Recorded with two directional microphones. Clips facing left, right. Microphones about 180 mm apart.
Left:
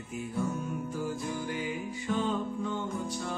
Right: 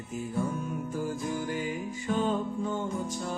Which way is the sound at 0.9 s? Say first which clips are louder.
Right 2 dB; 45° right (ahead or behind).